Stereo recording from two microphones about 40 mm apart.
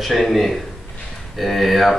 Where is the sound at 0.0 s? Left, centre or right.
Centre.